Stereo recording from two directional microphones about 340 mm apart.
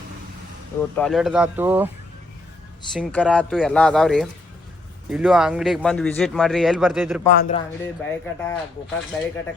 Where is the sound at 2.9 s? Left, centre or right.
Centre.